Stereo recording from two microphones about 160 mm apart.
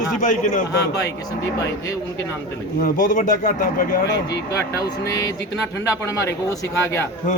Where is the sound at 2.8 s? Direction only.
60° left (ahead or behind); by 4.4 s 75° left (ahead or behind).